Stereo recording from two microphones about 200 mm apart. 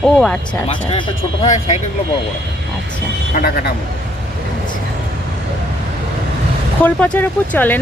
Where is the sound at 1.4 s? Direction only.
35° left (ahead or behind).